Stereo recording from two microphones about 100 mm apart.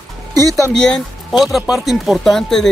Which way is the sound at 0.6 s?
5° left (ahead or behind).